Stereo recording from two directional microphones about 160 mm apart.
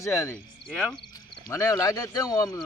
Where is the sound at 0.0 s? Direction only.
15° left (ahead or behind).